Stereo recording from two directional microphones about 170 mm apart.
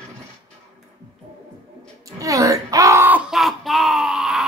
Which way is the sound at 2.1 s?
20° right (ahead or behind).